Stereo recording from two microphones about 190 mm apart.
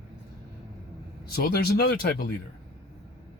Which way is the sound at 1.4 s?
55° left (ahead or behind).